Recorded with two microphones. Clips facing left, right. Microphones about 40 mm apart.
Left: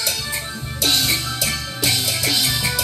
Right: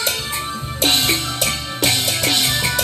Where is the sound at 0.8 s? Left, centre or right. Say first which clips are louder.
Right 2 dB; right.